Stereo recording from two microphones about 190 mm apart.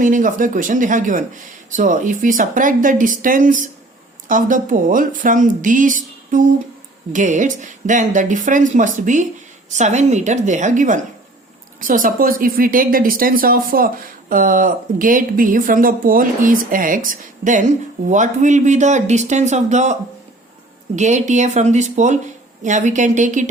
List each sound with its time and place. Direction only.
0.0 s speech: 45° right (ahead or behind)